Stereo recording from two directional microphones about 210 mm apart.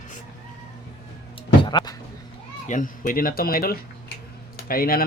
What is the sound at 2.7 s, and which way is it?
Speech, 40° left (ahead or behind).